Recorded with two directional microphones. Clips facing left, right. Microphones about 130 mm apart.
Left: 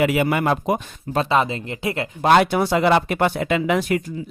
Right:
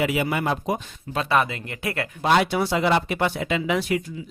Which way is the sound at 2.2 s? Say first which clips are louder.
Left 4 dB; 55° left (ahead or behind).